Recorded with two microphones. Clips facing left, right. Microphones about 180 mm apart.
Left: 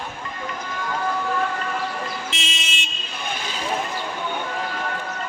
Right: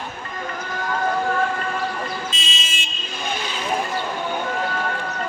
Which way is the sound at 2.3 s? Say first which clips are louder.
Even; 70° left (ahead or behind).